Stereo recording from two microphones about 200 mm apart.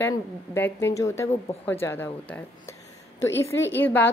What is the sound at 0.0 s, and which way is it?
A woman's voice, 10° left (ahead or behind).